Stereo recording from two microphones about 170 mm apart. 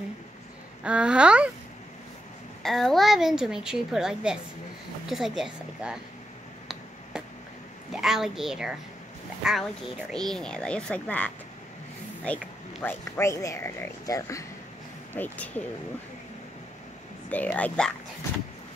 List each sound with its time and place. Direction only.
0.8 s speech: 5° right (ahead or behind)
2.6 s speech: centre (ahead or behind)
7.9 s speech: centre (ahead or behind); by 14.4 s 20° left (ahead or behind)
15.1 s speech: 10° left (ahead or behind)
17.3 s speech: 10° left (ahead or behind)